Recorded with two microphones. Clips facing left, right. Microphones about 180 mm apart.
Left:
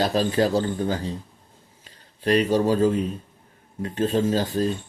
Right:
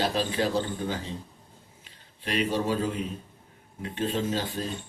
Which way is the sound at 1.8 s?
40° left (ahead or behind).